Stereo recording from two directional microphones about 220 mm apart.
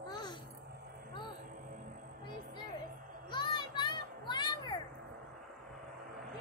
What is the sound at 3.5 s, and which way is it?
Children playing, 20° left (ahead or behind).